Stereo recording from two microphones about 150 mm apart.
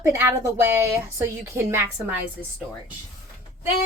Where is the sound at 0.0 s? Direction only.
20° right (ahead or behind).